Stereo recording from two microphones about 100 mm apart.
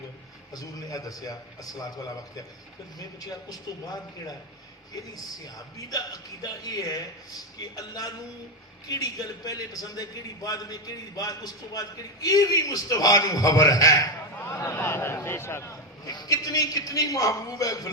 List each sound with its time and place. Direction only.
0.5 s a man's voice: 35° left (ahead or behind)
16.0 s a man's voice: 40° left (ahead or behind)